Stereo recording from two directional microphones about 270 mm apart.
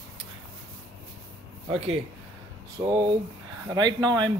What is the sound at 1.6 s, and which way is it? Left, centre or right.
Speech, right.